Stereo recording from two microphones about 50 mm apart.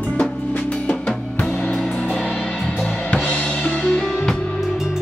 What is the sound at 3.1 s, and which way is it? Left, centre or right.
Drum kit, centre.